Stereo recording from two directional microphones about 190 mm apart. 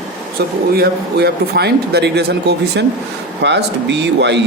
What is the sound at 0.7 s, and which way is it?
Speech, 55° right (ahead or behind).